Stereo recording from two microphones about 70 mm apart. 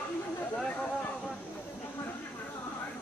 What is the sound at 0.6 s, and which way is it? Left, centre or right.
Speech, centre.